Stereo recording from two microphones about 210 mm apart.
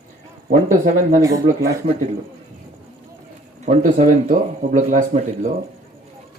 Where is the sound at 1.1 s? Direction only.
15° right (ahead or behind).